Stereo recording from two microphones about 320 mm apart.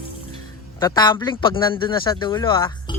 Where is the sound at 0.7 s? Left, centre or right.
Centre.